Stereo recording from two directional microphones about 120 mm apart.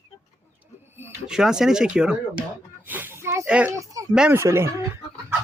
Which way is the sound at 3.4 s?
10° right (ahead or behind).